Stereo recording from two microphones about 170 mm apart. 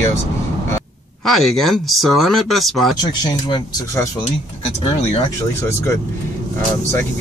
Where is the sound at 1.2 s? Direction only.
Centre (ahead or behind).